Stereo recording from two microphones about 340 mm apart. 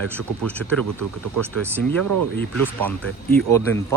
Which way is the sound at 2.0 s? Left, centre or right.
Right.